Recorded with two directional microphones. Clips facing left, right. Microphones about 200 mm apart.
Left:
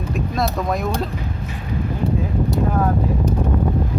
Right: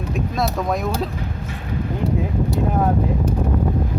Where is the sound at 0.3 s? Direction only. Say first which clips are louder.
Even; centre (ahead or behind).